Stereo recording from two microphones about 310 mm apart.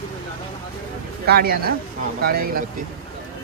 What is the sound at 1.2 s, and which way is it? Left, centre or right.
Speech, right.